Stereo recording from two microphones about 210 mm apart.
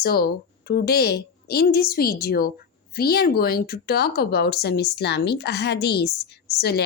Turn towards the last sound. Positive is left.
turn(degrees=50)  # may be behind; listen again after turning